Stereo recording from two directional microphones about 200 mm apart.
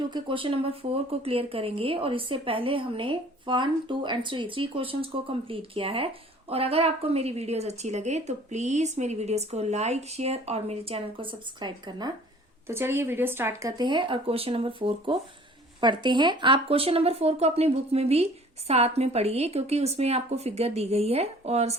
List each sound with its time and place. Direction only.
0.1 s a woman's voice: 25° right (ahead or behind)